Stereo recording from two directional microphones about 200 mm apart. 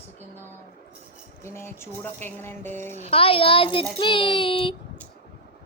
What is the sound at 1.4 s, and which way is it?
Speech, 10° left (ahead or behind).